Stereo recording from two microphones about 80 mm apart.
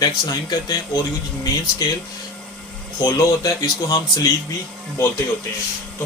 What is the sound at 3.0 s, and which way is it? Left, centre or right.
Speech, left.